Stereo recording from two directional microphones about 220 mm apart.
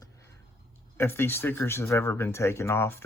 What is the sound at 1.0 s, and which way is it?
Speech, 10° left (ahead or behind).